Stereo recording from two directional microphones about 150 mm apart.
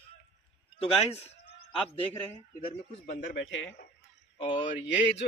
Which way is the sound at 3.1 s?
80° left.